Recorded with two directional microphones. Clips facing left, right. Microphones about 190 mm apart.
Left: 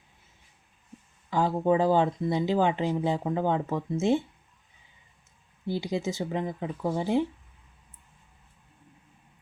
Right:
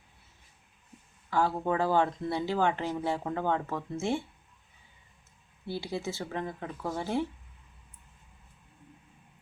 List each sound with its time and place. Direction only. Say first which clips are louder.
1.3 s speech: left 4 dB; 20° left (ahead or behind)
5.6 s speech: left 5 dB; 15° left (ahead or behind)